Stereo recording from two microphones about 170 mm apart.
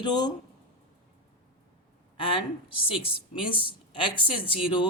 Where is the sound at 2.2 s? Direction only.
30° left (ahead or behind).